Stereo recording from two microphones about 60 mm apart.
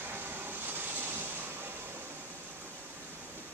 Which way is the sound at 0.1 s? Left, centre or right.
Right.